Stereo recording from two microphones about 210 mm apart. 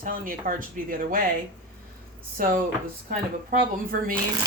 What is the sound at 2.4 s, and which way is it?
A woman's voice, 40° right (ahead or behind).